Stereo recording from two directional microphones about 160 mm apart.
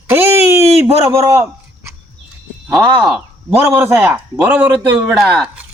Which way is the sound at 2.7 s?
Centre (ahead or behind).